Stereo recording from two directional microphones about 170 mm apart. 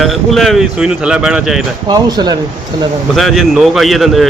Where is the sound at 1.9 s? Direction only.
25° right (ahead or behind).